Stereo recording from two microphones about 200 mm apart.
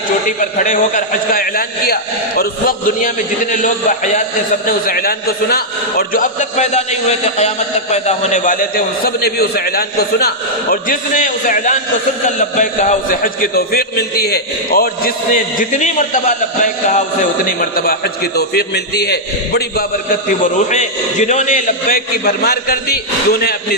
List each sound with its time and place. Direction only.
0.3 s a man's voice: 40° left (ahead or behind)
17.6 s a man's voice: 45° left (ahead or behind)